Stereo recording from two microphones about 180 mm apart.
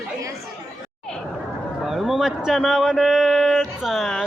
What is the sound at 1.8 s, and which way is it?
Speech, centre (ahead or behind).